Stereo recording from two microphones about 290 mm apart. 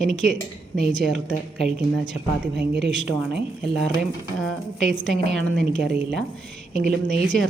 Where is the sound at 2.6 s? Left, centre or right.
Right.